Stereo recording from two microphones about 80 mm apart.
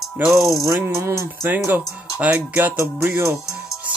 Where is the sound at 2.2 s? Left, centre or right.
Centre.